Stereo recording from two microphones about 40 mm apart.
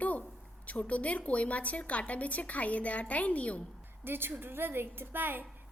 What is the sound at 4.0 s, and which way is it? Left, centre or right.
A woman's voice, right.